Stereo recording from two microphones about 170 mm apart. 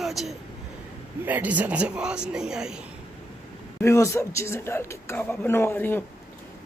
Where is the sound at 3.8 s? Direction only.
15° left (ahead or behind).